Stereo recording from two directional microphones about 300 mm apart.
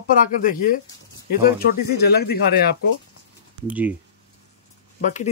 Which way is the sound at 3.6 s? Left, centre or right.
Centre.